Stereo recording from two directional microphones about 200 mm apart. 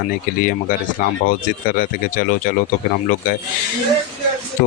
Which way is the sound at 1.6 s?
45° left (ahead or behind).